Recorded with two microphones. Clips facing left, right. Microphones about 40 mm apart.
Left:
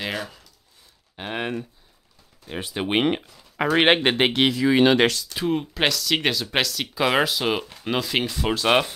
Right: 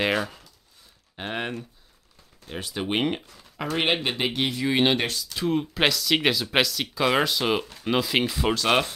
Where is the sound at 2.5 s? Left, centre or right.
Centre.